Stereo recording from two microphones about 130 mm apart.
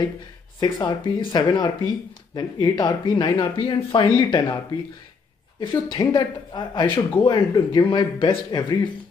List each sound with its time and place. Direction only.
0.6 s speech: 35° left (ahead or behind)